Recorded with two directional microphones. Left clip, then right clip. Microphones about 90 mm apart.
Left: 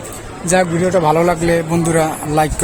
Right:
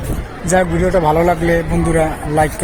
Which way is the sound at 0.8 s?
65° left (ahead or behind).